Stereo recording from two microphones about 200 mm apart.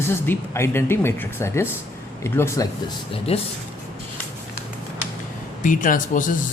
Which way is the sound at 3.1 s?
30° left (ahead or behind).